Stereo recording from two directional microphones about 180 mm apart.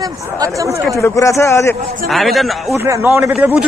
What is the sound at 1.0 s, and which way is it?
Speech, 15° left (ahead or behind).